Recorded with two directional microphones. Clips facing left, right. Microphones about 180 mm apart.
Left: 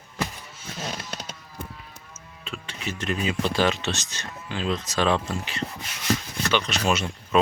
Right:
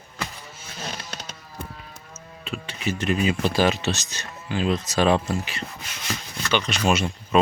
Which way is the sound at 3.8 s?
40° right (ahead or behind).